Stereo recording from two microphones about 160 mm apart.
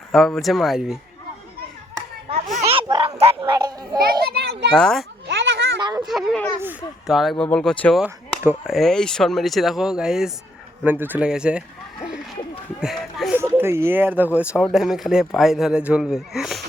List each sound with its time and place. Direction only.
0.1 s speech: centre (ahead or behind)
2.3 s a sound: 45° right (ahead or behind)
2.7 s a sound: 30° right (ahead or behind)
3.5 s a child's voice: 25° right (ahead or behind)
4.2 s a child's voice: 85° right
4.7 s speech: 5° left (ahead or behind)
5.3 s children playing: 90° right
5.8 s a child's voice: 25° right (ahead or behind)
6.1 s speech: centre (ahead or behind)
8.0 s speech: 5° right (ahead or behind)
12.8 s speech: centre (ahead or behind)
13.3 s speech: 10° right (ahead or behind)